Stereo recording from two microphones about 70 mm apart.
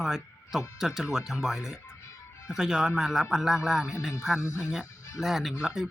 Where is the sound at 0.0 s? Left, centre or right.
Centre.